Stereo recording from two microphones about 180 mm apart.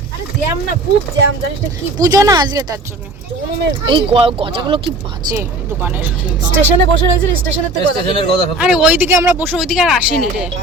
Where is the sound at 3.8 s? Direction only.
30° right (ahead or behind).